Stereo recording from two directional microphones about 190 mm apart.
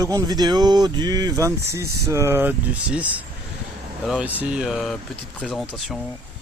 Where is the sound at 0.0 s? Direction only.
20° right (ahead or behind); by 6.0 s centre (ahead or behind).